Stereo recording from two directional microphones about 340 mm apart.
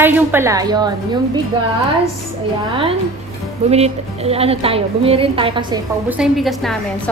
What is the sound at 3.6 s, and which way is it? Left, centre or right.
A woman's voice, centre.